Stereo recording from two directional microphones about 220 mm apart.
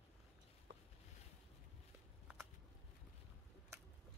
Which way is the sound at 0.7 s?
50° right (ahead or behind).